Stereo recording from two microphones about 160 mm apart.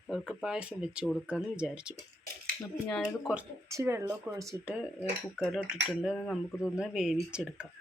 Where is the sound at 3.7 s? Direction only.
20° right (ahead or behind).